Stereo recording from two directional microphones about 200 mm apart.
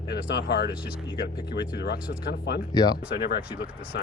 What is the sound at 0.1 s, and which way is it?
Speech, 55° left (ahead or behind).